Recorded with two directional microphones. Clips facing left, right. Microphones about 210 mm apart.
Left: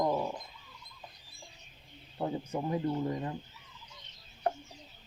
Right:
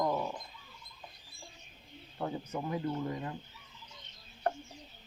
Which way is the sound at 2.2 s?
25° left (ahead or behind).